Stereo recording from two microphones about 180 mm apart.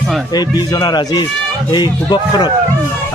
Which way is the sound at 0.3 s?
20° left (ahead or behind).